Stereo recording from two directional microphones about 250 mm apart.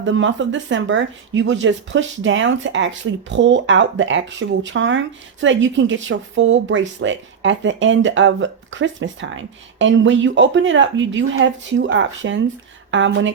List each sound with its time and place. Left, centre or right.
0.0 s speech: right